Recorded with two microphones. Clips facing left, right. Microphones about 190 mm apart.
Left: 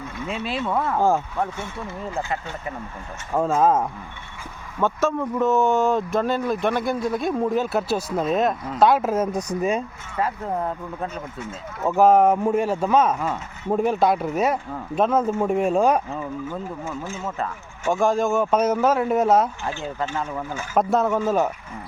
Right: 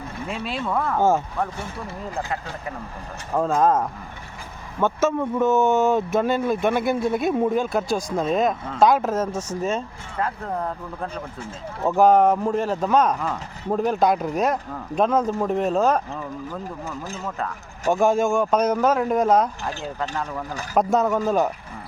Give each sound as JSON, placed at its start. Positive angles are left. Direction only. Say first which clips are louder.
{"t": 0.3, "sound": "speech", "louder": "left 1 dB", "side_deg": 0}
{"t": 1.5, "sound": "speech", "louder": "left 1 dB", "side_deg": -35}
{"t": 2.1, "sound": "speech", "louder": "left 1 dB", "side_deg": 0}
{"t": 7.6, "sound": "speech", "louder": "even", "side_deg": 5}
{"t": 11.1, "sound": "speech", "louder": "left 1 dB", "side_deg": -35}
{"t": 11.9, "sound": "speech", "louder": "even", "side_deg": 5}
{"t": 16.8, "sound": "speech", "louder": "left 2 dB", "side_deg": -40}
{"t": 17.2, "sound": "speech", "louder": "left 1 dB", "side_deg": 0}